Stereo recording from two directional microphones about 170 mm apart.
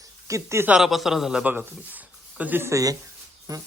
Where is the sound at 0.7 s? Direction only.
Centre (ahead or behind); by 3.6 s 20° right (ahead or behind).